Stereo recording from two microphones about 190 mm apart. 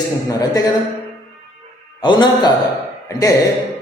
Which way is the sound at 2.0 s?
25° left (ahead or behind).